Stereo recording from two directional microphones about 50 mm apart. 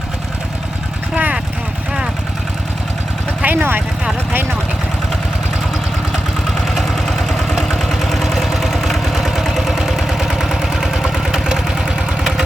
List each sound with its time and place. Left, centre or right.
1.1 s vehicle: right
3.4 s speech: right
6.7 s engine: centre